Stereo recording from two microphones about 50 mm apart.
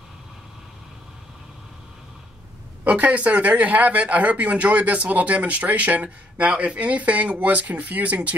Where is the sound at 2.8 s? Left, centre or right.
Right.